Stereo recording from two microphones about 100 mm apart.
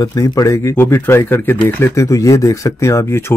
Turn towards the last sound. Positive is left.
turn(degrees=30)  # may be behind; listen again after turning